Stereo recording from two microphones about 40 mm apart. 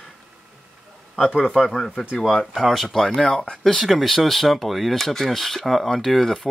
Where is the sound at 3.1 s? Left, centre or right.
Left.